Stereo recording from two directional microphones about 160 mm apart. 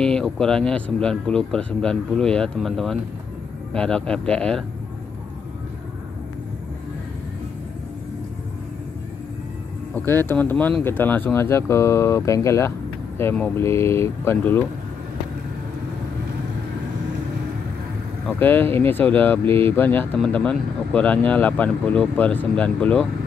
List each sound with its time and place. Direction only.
0.0 s speech: 5° left (ahead or behind)
9.9 s speech: 15° left (ahead or behind)
18.2 s speech: 10° left (ahead or behind)